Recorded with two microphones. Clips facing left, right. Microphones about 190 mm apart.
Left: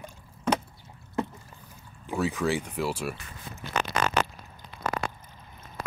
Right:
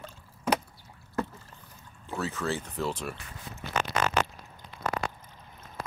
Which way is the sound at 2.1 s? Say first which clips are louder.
Left 5 dB; 15° left (ahead or behind).